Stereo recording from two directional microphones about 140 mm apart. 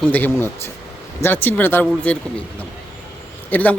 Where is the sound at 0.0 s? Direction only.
10° left (ahead or behind).